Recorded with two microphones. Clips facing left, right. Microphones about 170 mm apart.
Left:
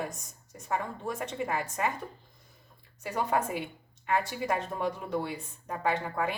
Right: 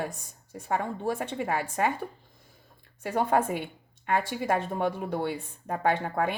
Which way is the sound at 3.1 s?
50° right (ahead or behind).